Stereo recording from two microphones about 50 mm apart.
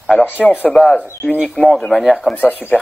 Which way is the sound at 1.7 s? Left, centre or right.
Centre.